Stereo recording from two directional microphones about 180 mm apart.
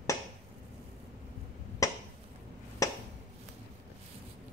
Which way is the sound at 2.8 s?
20° left (ahead or behind).